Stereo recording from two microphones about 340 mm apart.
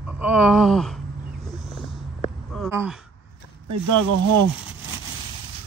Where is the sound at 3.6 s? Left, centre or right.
Right.